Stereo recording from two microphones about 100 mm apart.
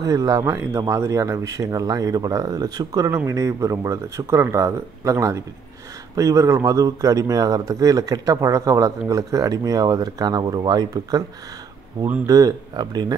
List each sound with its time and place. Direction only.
0.0 s speech: 35° right (ahead or behind)
12.3 s speech: 40° right (ahead or behind)